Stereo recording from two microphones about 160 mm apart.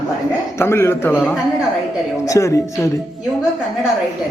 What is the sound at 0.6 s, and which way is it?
Speech, 15° left (ahead or behind).